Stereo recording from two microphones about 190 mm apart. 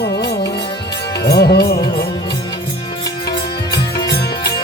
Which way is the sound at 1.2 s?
60° left (ahead or behind).